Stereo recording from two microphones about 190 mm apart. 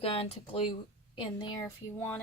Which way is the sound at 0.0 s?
30° left (ahead or behind).